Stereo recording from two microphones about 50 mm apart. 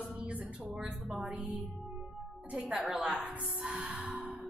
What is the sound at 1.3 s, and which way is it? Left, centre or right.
Music, right.